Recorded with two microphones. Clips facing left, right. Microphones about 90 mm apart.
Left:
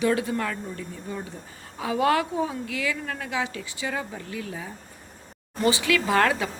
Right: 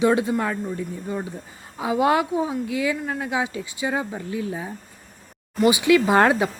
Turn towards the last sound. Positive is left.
turn(degrees=-25)  # may be behind; listen again after turning